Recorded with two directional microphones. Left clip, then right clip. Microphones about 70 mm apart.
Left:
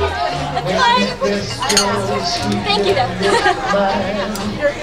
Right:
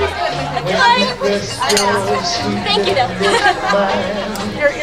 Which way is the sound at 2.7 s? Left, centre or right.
Centre.